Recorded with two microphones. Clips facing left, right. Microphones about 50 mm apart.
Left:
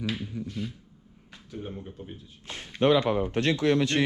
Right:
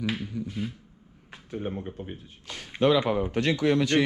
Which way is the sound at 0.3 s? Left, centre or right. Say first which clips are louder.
Right 2 dB; centre.